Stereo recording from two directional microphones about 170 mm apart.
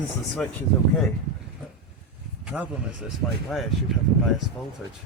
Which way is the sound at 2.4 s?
5° right (ahead or behind).